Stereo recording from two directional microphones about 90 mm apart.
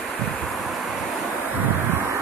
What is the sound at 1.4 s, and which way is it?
Wind, 20° right (ahead or behind).